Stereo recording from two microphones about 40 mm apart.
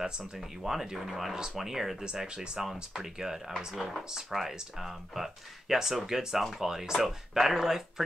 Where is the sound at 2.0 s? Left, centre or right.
Right.